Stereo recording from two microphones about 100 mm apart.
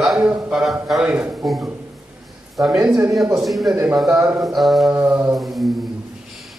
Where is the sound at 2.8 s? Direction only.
15° right (ahead or behind).